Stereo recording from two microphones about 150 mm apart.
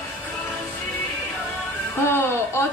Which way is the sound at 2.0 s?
15° left (ahead or behind).